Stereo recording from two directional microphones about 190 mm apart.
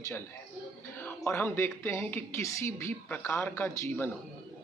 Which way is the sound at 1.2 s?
10° left (ahead or behind).